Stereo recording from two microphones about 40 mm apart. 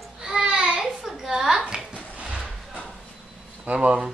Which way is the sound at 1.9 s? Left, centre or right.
Right.